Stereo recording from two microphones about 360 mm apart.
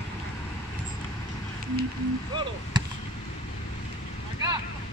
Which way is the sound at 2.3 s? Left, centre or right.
Centre.